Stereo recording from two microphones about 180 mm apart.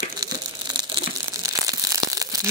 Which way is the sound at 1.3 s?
20° right (ahead or behind).